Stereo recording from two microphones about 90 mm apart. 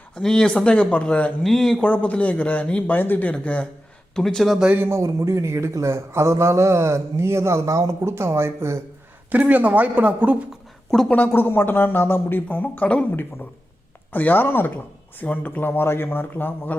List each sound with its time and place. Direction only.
0.1 s speech: 5° left (ahead or behind)
4.5 s speech: 10° right (ahead or behind)
4.8 s a man's voice: 30° right (ahead or behind)
9.3 s speech: 20° right (ahead or behind)
11.1 s speech: 20° left (ahead or behind)